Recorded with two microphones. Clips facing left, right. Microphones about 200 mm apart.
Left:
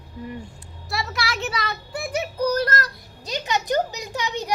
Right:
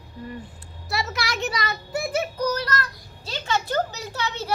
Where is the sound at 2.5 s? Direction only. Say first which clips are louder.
Left 4 dB; 50° left (ahead or behind).